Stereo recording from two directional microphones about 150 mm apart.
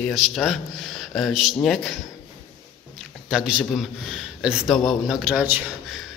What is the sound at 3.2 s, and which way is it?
Speech, 5° right (ahead or behind).